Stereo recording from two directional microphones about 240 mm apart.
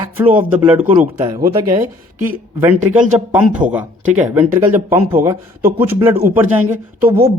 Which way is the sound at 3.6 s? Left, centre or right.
Centre.